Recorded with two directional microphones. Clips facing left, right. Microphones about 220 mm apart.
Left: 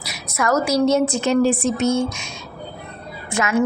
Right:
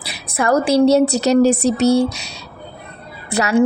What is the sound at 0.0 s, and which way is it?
A woman's voice, 30° right (ahead or behind).